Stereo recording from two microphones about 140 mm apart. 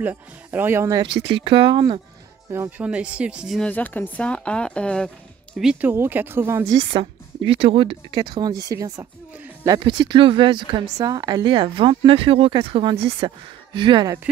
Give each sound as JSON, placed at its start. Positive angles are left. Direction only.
{"t": 0.0, "sound": "speech", "side_deg": -15}
{"t": 1.0, "sound": "a woman's voice", "side_deg": -35}
{"t": 2.5, "sound": "speech", "side_deg": -15}
{"t": 3.7, "sound": "speech", "side_deg": 15}
{"t": 5.7, "sound": "speech", "side_deg": -10}
{"t": 6.8, "sound": "a woman's voice", "side_deg": -40}
{"t": 13.7, "sound": "a woman's voice", "side_deg": -35}